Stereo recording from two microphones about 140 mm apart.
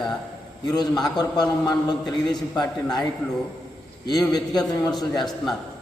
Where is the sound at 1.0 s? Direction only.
30° left (ahead or behind).